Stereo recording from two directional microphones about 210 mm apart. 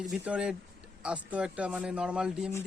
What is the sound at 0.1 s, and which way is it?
A man's voice, 5° right (ahead or behind).